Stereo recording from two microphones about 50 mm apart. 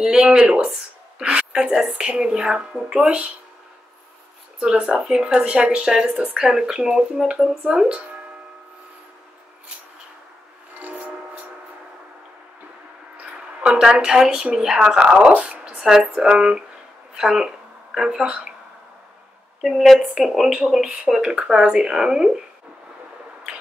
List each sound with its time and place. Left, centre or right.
0.0 s speech: centre
4.6 s speech: centre
13.7 s speech: centre
19.6 s speech: centre